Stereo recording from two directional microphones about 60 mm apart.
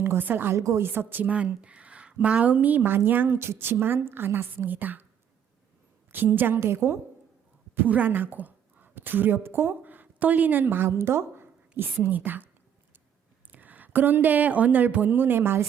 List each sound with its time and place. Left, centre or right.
0.0 s a woman's voice: right
0.5 s a woman's voice: right
0.8 s a woman's voice: right
1.4 s a woman's voice: right
6.1 s a woman's voice: right
6.6 s a woman's voice: right
7.8 s a woman's voice: right
11.8 s a woman's voice: right
13.5 s speech: right